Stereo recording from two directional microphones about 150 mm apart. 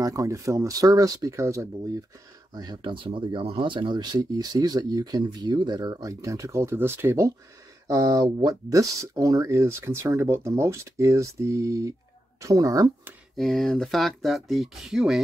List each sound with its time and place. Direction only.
0.0 s speech: 20° right (ahead or behind)
13.4 s speech: centre (ahead or behind)